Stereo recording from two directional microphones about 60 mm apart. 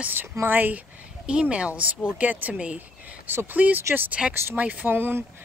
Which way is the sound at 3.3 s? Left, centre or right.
Right.